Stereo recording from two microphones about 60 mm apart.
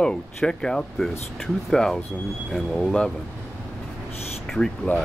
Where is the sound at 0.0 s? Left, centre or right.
Centre.